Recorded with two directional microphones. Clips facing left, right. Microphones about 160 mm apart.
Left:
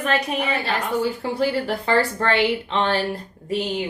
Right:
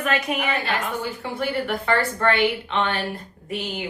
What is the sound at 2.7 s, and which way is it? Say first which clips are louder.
Speech: left 3 dB; 35° left (ahead or behind).